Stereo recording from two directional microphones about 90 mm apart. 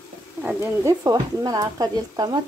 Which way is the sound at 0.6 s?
30° right (ahead or behind).